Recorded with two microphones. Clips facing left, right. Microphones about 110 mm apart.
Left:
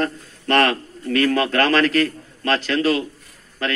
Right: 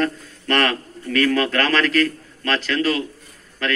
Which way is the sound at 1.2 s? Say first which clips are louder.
Left 1 dB; 15° left (ahead or behind).